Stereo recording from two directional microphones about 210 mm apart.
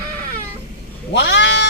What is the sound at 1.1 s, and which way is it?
Goat, 60° left (ahead or behind).